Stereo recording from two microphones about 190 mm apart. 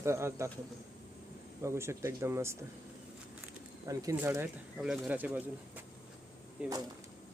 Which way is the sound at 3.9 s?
15° right (ahead or behind).